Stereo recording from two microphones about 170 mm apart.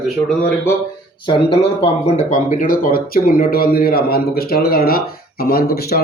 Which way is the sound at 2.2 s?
50° left (ahead or behind).